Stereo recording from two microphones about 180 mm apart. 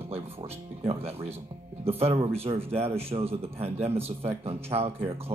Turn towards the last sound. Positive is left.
turn(degrees=-35)  # may be behind; listen again after turning